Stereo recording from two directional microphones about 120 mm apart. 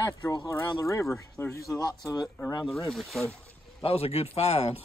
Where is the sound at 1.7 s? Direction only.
35° left (ahead or behind).